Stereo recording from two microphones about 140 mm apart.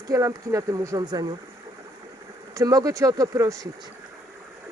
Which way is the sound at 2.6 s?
25° right (ahead or behind).